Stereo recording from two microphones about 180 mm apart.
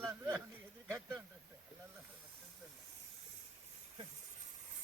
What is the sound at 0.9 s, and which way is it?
Speech, 20° right (ahead or behind).